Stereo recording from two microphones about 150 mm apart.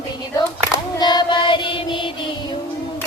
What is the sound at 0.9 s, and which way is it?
Music, 30° left (ahead or behind).